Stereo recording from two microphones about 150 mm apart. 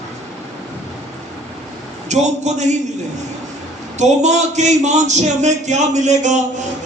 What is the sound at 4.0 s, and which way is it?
A man's voice, 50° right (ahead or behind).